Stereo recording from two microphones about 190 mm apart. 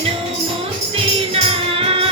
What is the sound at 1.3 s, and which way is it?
Music, 30° right (ahead or behind).